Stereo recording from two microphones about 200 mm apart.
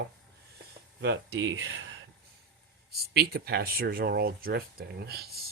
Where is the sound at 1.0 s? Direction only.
60° right (ahead or behind).